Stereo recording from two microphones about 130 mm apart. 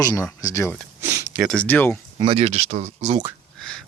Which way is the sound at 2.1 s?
45° right (ahead or behind).